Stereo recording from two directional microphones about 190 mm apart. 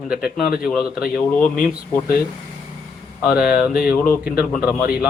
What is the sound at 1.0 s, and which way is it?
Speech, 50° left (ahead or behind).